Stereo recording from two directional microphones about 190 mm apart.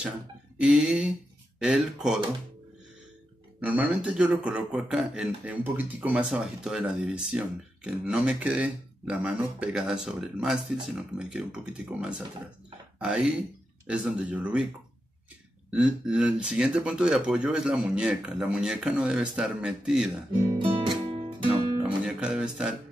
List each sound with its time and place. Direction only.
0.6 s a man's voice: 5° right (ahead or behind)
3.6 s a man's voice: 10° right (ahead or behind)
15.7 s a man's voice: 5° right (ahead or behind)
20.5 s music: 25° right (ahead or behind)
22.0 s speech: 5° right (ahead or behind)